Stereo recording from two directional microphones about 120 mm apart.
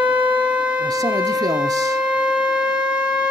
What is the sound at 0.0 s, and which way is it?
Shofar, 10° right (ahead or behind).